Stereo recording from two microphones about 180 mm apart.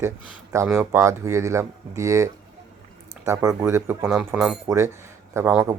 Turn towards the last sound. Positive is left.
turn(degrees=-10)  # may be behind; listen again after turning